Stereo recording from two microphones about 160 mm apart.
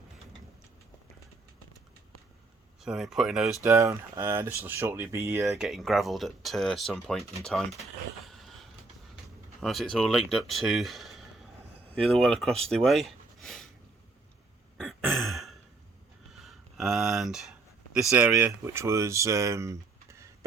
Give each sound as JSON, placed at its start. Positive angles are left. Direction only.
{"t": 2.8, "sound": "speech", "side_deg": 0}
{"t": 3.6, "sound": "speech", "side_deg": -20}
{"t": 5.5, "sound": "speech", "side_deg": 0}
{"t": 8.2, "sound": "a sound", "side_deg": 0}
{"t": 9.6, "sound": "speech", "side_deg": 0}
{"t": 14.8, "sound": "throat clearing", "side_deg": 0}
{"t": 16.3, "sound": "a sound", "side_deg": 0}
{"t": 18.2, "sound": "speech", "side_deg": -10}